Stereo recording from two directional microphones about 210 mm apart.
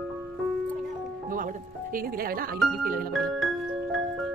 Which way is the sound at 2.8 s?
45° right (ahead or behind).